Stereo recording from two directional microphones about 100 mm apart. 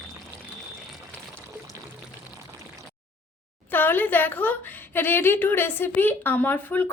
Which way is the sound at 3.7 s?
20° left (ahead or behind).